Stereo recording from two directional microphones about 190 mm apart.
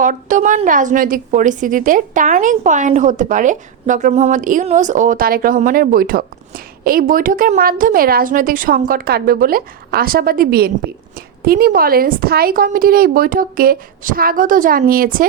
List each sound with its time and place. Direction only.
0.0 s a woman's voice: 45° right (ahead or behind)